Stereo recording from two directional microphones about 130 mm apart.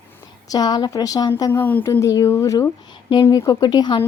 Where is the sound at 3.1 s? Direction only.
35° left (ahead or behind).